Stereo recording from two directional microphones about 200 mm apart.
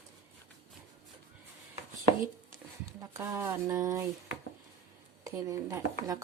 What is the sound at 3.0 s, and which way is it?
Speech, 10° right (ahead or behind).